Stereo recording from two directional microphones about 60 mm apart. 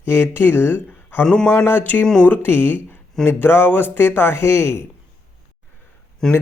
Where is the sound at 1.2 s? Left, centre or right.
Centre.